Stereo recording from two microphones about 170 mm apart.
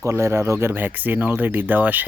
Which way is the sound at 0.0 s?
15° right (ahead or behind).